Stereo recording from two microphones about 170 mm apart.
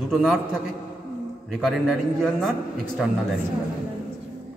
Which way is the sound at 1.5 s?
Centre (ahead or behind).